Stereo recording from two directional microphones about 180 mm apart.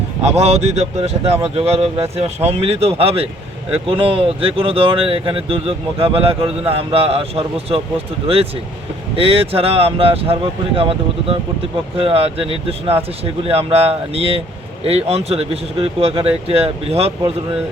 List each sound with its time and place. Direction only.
0.2 s speech: 35° right (ahead or behind)